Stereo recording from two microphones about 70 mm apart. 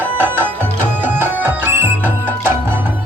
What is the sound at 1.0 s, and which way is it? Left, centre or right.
Music, right.